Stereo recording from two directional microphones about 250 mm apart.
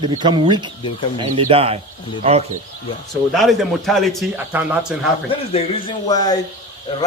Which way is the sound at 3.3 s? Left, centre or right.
Centre.